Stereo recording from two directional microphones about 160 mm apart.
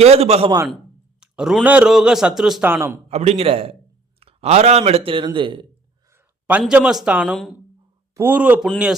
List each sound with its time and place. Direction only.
0.0 s speech: 40° right (ahead or behind)
1.2 s speech: 5° right (ahead or behind)
2.6 s speech: 15° right (ahead or behind)
3.1 s speech: 40° right (ahead or behind)
6.1 s speech: 10° right (ahead or behind)
8.1 s speech: 10° right (ahead or behind)